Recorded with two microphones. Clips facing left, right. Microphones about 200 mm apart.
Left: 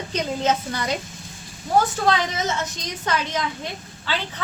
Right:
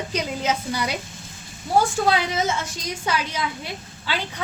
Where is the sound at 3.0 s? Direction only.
10° right (ahead or behind).